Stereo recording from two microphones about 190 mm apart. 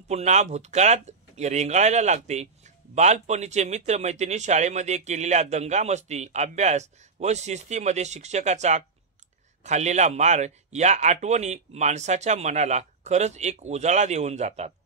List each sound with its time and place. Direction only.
0.1 s speech: 35° right (ahead or behind)